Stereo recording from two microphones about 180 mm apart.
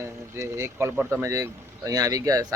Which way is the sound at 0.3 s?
15° right (ahead or behind).